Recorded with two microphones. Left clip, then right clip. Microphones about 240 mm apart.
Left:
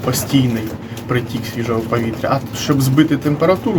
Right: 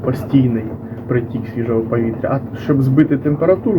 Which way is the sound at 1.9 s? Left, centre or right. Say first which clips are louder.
Left 1 dB; centre.